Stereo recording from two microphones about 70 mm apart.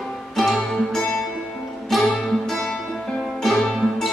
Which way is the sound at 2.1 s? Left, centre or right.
Centre.